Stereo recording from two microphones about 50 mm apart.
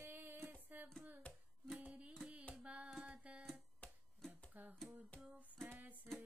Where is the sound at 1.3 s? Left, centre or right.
Left.